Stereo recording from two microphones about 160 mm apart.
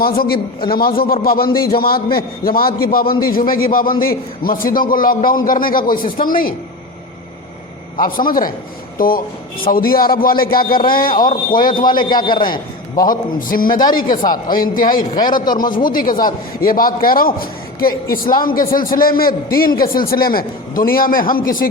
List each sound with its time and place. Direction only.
0.7 s a man's voice: 70° left (ahead or behind)
7.9 s a man's voice: 60° left (ahead or behind)
11.8 s a man's voice: 30° left (ahead or behind)
13.1 s a man's voice: 60° left (ahead or behind)
14.2 s a man's voice: 25° left (ahead or behind)
14.5 s a man's voice: 60° left (ahead or behind)
14.9 s a man's voice: 25° left (ahead or behind)
15.7 s a man's voice: 60° left (ahead or behind)